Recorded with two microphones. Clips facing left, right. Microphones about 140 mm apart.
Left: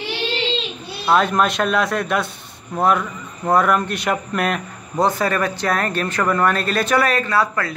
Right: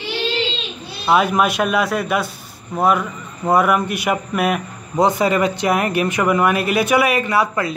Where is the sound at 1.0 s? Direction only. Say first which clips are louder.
Right 1 dB; 5° right (ahead or behind).